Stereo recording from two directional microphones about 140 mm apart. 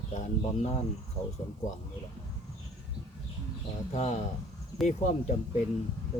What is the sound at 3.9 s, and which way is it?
Speech, 50° left (ahead or behind).